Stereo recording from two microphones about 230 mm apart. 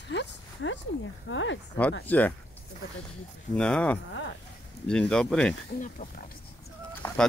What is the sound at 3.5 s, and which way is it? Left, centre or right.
Speech, centre.